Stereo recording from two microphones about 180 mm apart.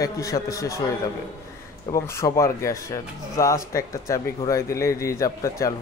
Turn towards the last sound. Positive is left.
turn(degrees=20)  # may be behind; listen again after turning